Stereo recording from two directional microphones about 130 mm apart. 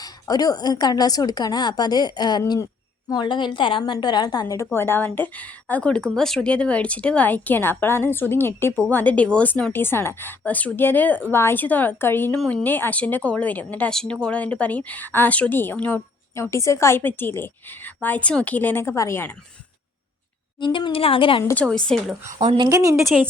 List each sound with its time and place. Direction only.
0.0 s a woman's voice: 30° left (ahead or behind)
20.6 s speech: 35° left (ahead or behind)
21.5 s a woman's voice: 5° left (ahead or behind)
22.3 s speech: 65° right (ahead or behind)
22.5 s a woman's voice: 30° right (ahead or behind)